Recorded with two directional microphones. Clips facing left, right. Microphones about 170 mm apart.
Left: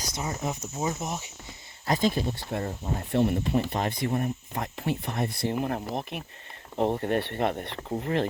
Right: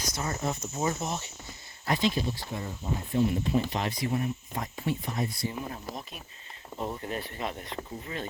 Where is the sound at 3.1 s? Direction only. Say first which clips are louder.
Left 2 dB; 70° left (ahead or behind).